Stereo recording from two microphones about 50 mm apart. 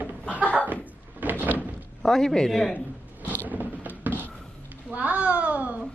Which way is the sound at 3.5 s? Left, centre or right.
Right.